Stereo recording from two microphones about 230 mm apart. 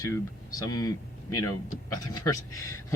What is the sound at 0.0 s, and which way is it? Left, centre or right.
Speech, centre.